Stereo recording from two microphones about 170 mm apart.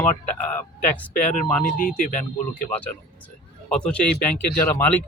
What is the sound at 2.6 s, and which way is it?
Speech, 10° left (ahead or behind).